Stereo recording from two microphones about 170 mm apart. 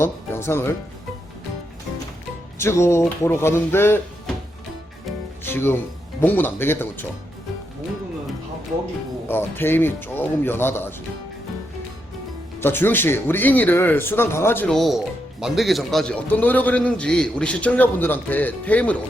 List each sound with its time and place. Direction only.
0.0 s speech: 15° left (ahead or behind)
2.6 s a man's voice: 15° left (ahead or behind)
5.4 s speech: 15° left (ahead or behind)
9.3 s a man's voice: 10° left (ahead or behind)
12.5 s a man's voice: 15° left (ahead or behind)